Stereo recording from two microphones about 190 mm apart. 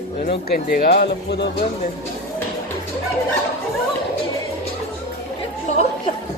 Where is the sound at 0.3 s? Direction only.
55° left (ahead or behind).